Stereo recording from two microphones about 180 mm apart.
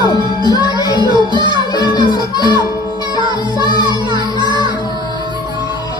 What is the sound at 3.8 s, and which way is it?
Music, 25° right (ahead or behind).